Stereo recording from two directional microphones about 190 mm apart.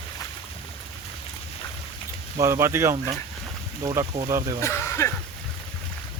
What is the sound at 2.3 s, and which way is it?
Speech, 15° right (ahead or behind).